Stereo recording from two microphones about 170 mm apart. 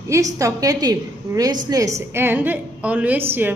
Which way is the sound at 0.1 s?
20° right (ahead or behind).